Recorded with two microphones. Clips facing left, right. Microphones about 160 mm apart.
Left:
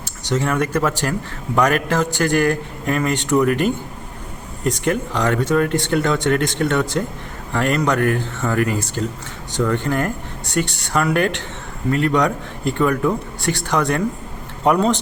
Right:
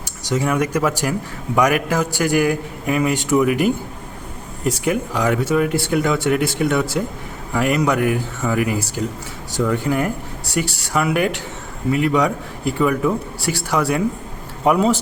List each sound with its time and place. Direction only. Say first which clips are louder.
0.3 s speech: even; 10° right (ahead or behind)